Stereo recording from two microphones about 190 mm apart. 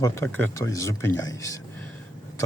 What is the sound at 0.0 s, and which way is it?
Speech, 10° left (ahead or behind).